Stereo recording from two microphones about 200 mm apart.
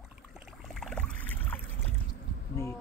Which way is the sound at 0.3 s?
Centre (ahead or behind).